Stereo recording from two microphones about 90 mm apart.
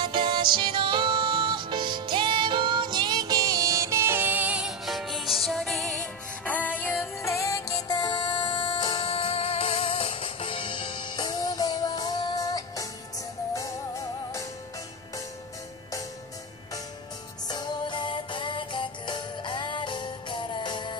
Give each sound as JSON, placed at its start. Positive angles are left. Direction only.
{"t": 0.0, "sound": "music", "side_deg": -65}
{"t": 4.8, "sound": "music", "side_deg": 0}
{"t": 7.2, "sound": "music", "side_deg": 35}
{"t": 8.0, "sound": "music", "side_deg": 60}
{"t": 17.5, "sound": "music", "side_deg": 55}